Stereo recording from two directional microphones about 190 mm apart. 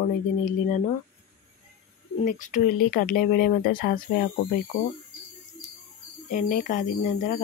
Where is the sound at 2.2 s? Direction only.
40° left (ahead or behind).